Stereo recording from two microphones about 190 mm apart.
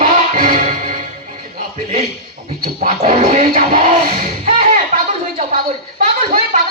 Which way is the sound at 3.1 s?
30° right (ahead or behind).